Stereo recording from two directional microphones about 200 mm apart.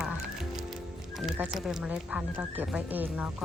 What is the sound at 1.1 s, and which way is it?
Speech, centre (ahead or behind).